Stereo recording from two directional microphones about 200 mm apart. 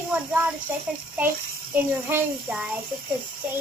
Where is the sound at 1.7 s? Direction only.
10° right (ahead or behind).